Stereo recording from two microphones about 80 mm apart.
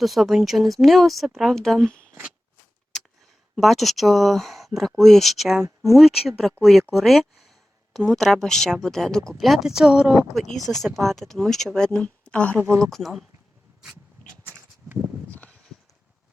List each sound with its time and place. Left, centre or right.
0.0 s speech: centre
2.9 s a sound: centre
3.5 s speech: centre
10.3 s speech: centre
12.5 s speech: right
12.8 s speech: centre
15.3 s a sound: centre